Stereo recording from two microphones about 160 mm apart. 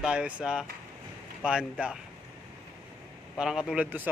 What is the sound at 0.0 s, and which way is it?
Speech, 5° right (ahead or behind).